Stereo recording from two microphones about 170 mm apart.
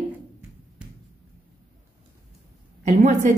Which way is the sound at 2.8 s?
45° right (ahead or behind).